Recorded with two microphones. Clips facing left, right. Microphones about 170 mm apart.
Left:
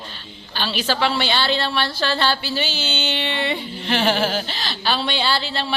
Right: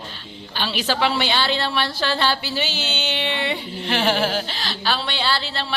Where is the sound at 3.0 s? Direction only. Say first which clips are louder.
Even; 5° right (ahead or behind).